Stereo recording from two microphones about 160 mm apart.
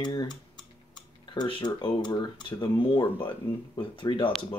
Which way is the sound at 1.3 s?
30° left (ahead or behind).